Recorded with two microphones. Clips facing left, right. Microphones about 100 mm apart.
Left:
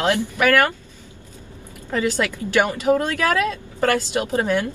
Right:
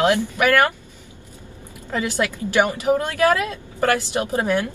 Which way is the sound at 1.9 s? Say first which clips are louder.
Left 1 dB; 15° right (ahead or behind).